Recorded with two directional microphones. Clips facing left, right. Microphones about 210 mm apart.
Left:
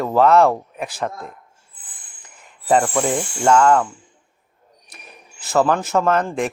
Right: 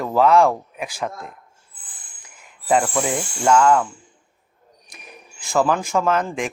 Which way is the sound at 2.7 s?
Centre (ahead or behind).